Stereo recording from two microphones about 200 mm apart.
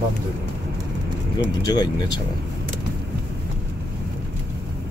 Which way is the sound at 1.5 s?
20° left (ahead or behind).